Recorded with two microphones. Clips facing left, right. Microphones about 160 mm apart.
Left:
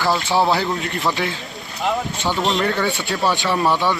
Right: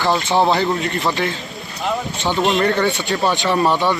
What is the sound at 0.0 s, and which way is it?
Speech, 20° right (ahead or behind).